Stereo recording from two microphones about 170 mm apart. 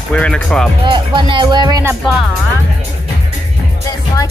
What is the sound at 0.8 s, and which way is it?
Speech, 30° right (ahead or behind).